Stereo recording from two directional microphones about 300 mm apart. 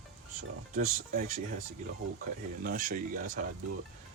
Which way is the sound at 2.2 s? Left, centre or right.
Right.